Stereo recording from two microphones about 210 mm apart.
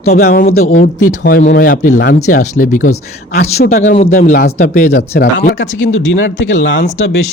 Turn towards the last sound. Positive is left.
turn(degrees=60)  # may be behind; listen again after turning